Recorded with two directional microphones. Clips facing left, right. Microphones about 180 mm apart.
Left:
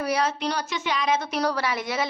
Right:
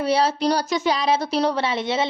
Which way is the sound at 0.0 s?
30° right (ahead or behind).